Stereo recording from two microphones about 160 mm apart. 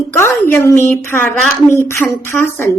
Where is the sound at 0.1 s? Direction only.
15° left (ahead or behind).